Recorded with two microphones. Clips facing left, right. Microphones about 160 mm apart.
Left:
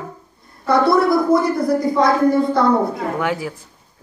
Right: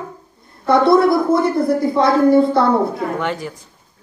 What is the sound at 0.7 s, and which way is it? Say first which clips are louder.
A woman's voice: right 2 dB; 25° right (ahead or behind).